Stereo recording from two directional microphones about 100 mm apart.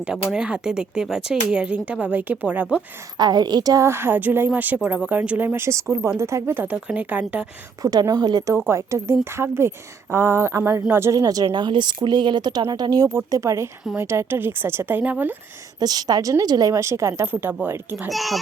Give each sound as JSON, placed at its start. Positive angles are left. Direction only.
{"t": 0.0, "sound": "speech", "side_deg": -5}
{"t": 3.2, "sound": "speech", "side_deg": -45}
{"t": 3.8, "sound": "speech", "side_deg": -25}
{"t": 7.8, "sound": "speech", "side_deg": -40}
{"t": 8.5, "sound": "speech", "side_deg": -25}
{"t": 11.5, "sound": "speech", "side_deg": -50}
{"t": 15.8, "sound": "speech", "side_deg": -40}
{"t": 18.1, "sound": "a child's voice", "side_deg": 0}